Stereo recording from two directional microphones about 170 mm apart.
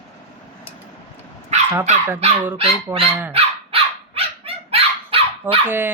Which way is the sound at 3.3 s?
35° right (ahead or behind).